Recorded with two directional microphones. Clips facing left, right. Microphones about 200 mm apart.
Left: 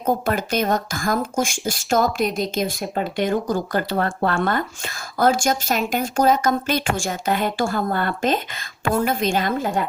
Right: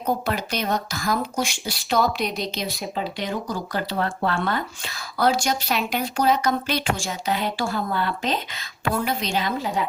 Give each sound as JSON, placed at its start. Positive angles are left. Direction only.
{"t": 0.0, "sound": "speech", "side_deg": 50}
{"t": 2.0, "sound": "speech", "side_deg": 0}
{"t": 2.9, "sound": "speech", "side_deg": 50}